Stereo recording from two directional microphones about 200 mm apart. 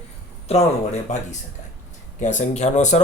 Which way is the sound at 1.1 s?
35° left (ahead or behind).